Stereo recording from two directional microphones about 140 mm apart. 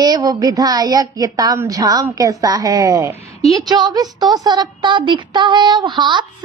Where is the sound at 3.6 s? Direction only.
30° right (ahead or behind).